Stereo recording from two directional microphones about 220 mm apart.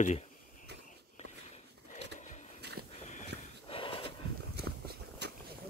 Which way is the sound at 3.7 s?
25° left (ahead or behind).